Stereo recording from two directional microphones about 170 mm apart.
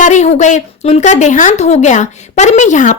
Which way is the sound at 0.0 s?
45° left (ahead or behind).